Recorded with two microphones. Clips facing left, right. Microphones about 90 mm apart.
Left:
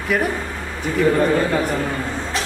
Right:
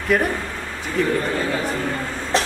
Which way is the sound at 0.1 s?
Centre (ahead or behind).